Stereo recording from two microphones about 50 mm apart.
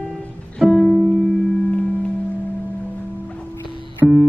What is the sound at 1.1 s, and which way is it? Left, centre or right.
Music, left.